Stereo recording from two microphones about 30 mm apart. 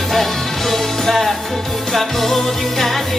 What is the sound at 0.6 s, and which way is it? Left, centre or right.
Music, centre.